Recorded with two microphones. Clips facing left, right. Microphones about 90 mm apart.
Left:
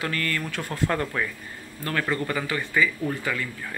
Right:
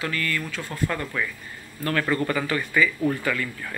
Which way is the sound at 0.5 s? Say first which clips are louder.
Left 2 dB; 60° left (ahead or behind).